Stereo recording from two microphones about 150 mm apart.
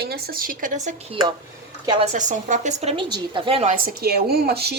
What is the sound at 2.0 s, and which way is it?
A woman's voice, 55° right (ahead or behind).